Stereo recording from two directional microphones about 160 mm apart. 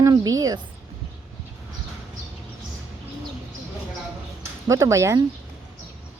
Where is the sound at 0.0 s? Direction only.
20° right (ahead or behind).